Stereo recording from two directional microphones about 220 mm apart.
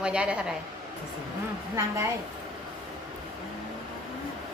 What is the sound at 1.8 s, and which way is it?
Speech, 15° right (ahead or behind).